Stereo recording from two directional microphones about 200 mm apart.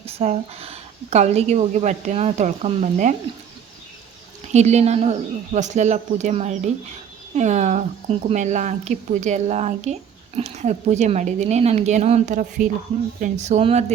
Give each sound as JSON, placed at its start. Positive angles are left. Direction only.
{"t": 0.0, "sound": "a woman's voice", "side_deg": -30}
{"t": 4.5, "sound": "a woman's voice", "side_deg": -35}